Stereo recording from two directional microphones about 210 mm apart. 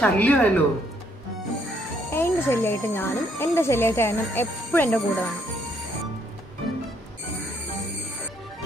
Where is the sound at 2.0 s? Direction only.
10° left (ahead or behind).